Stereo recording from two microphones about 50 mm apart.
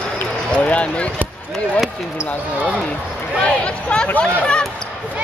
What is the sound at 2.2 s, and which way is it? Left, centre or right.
Speech, left.